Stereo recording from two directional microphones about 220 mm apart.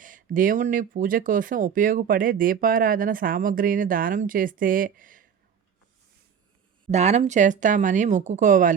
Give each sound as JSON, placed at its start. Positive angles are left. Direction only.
{"t": 0.0, "sound": "speech", "side_deg": -35}
{"t": 6.8, "sound": "speech", "side_deg": -30}